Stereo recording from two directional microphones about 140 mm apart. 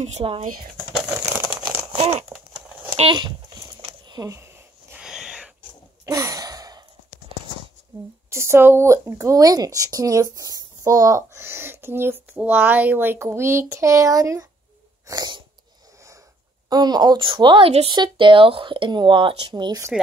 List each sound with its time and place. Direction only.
0.0 s speech: 45° right (ahead or behind)
1.0 s a sound: 15° right (ahead or behind)
2.0 s crumpling: 45° right (ahead or behind)
2.2 s a sound: 5° right (ahead or behind)
3.0 s speech: 35° right (ahead or behind)
4.1 s a sound: 25° right (ahead or behind)
5.0 s wheeze: 5° right (ahead or behind)
6.0 s sigh: 25° right (ahead or behind)
8.3 s speech: 20° right (ahead or behind)
15.0 s sneeze: 30° right (ahead or behind)
16.6 s speech: 30° right (ahead or behind)